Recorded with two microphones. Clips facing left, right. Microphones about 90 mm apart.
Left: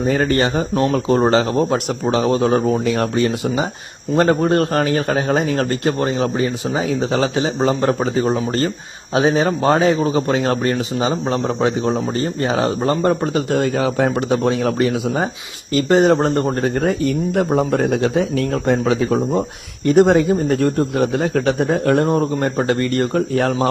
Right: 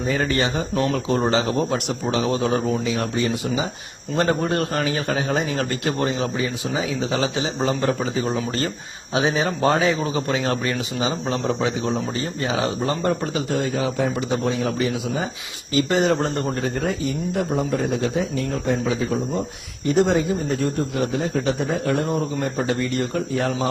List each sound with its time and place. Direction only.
0.0 s speech: 45° left (ahead or behind)
0.7 s speech: 30° left (ahead or behind)
0.9 s speech: 45° left (ahead or behind)
2.8 s speech: 55° left (ahead or behind)
4.1 s speech: 40° left (ahead or behind); by 15.3 s 60° left (ahead or behind)
15.7 s speech: 45° left (ahead or behind)